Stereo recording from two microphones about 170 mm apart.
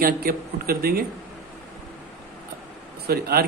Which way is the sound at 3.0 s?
65° right (ahead or behind).